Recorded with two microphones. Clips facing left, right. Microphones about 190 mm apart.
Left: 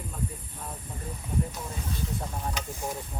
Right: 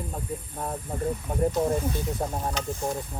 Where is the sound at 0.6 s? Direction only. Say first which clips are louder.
Right 10 dB; 55° right (ahead or behind).